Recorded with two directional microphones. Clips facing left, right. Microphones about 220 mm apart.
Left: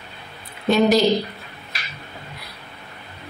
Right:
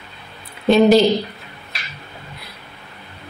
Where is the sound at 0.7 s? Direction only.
30° right (ahead or behind).